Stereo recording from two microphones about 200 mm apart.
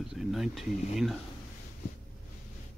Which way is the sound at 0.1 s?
Centre (ahead or behind).